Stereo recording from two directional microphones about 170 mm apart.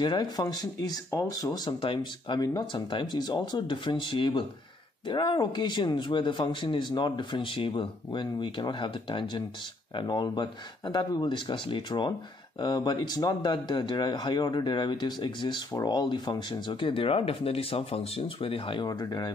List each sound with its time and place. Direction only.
0.0 s speech: 25° left (ahead or behind)